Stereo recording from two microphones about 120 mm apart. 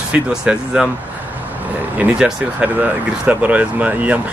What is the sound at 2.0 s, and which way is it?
Speech, 10° right (ahead or behind).